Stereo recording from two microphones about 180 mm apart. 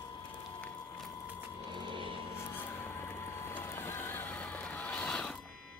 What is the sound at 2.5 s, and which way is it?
Neigh, 15° left (ahead or behind).